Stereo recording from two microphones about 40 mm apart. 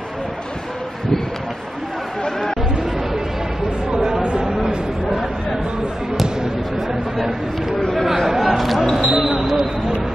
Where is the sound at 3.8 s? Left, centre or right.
Centre.